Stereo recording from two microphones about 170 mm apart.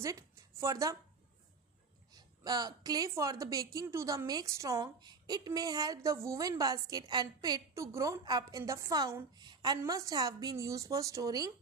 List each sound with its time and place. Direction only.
0.0 s speech: 20° right (ahead or behind)
2.1 s a woman's voice: 25° right (ahead or behind)